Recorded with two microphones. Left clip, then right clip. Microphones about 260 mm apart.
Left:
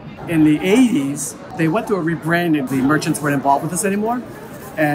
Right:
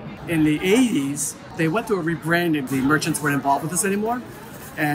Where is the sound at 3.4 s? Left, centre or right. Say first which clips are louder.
Left 6 dB; right.